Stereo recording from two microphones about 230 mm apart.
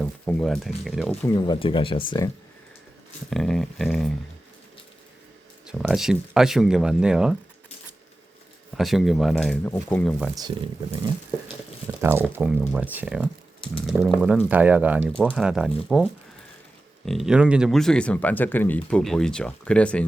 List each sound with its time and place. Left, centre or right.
0.0 s speech: centre
1.3 s speech: centre
3.2 s speech: centre
5.6 s speech: centre
8.7 s speech: centre
12.0 s speech: centre
17.1 s speech: centre